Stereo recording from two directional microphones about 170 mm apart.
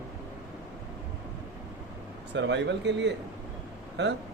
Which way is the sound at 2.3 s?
90° right.